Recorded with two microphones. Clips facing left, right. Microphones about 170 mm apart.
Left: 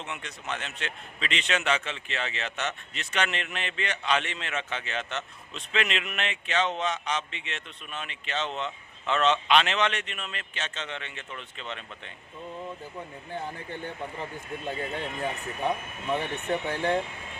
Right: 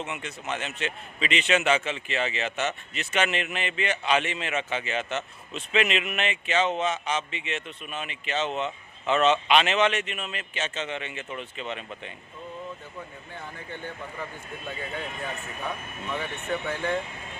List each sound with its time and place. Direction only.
0.0 s a man's voice: 5° right (ahead or behind)
16.1 s speech: 30° left (ahead or behind)